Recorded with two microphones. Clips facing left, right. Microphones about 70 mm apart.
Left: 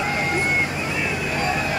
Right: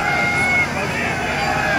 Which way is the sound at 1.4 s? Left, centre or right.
Right.